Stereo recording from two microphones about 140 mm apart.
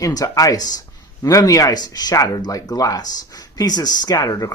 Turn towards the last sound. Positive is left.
turn(degrees=25)  # may be behind; listen again after turning